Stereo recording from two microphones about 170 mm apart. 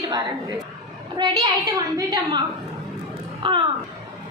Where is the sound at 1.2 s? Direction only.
20° right (ahead or behind).